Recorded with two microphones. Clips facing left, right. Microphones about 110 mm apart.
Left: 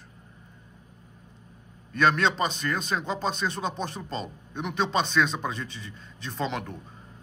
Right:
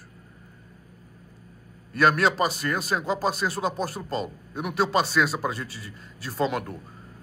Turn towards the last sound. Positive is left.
turn(degrees=-5)  # may be behind; listen again after turning